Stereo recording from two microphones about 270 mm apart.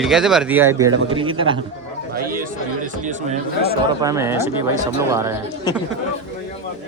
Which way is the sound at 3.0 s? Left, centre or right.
Right.